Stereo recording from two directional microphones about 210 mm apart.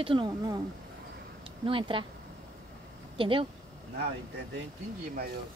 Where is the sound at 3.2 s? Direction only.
25° right (ahead or behind).